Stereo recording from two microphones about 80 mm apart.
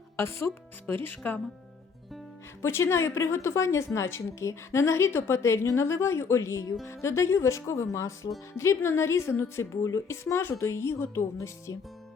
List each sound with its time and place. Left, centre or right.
0.2 s speech: left
2.6 s speech: left